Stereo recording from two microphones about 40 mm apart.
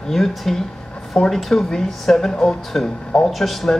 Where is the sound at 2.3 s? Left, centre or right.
Centre.